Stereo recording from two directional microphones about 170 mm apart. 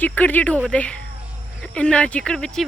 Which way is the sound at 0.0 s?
10° left (ahead or behind).